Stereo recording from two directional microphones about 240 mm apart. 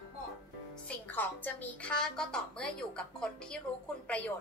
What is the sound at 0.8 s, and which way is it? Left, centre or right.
A woman's voice, centre.